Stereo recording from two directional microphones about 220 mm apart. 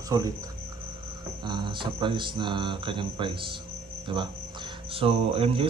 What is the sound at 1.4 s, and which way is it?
Speech, 20° right (ahead or behind).